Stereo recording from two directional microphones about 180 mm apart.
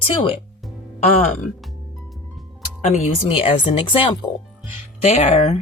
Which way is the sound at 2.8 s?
40° left (ahead or behind).